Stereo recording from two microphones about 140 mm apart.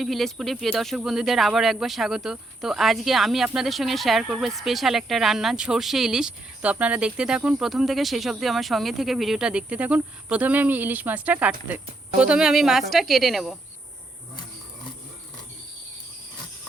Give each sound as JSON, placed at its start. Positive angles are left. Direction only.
{"t": 0.0, "sound": "speech", "side_deg": 0}